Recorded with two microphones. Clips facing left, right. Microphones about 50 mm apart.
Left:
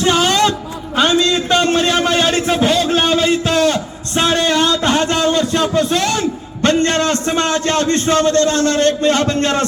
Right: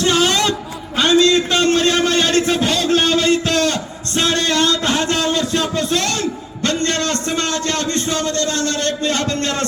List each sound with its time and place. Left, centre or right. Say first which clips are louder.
0.0 s music: left 2 dB; centre
0.9 s a sound: right 1 dB; centre
6.6 s a man's voice: left 5 dB; left